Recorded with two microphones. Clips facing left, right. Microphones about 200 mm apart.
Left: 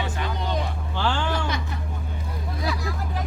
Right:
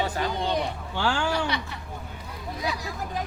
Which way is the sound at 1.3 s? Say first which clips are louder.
Even; 50° left (ahead or behind).